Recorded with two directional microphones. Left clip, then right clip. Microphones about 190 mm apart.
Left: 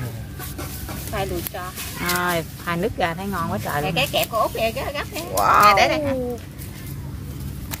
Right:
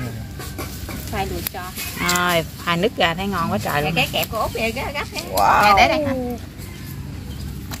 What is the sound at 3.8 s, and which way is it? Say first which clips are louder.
Speech: right 1 dB; 60° left (ahead or behind).